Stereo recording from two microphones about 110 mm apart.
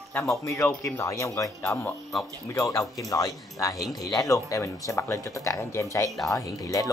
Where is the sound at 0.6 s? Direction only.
5° left (ahead or behind).